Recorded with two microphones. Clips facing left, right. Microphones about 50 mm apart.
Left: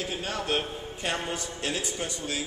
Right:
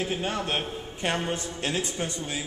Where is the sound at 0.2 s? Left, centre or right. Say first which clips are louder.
Right 1 dB; right.